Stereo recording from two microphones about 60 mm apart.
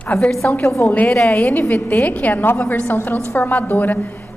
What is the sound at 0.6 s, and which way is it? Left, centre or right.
Speech, left.